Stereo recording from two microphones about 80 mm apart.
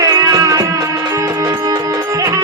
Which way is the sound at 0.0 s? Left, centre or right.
Right.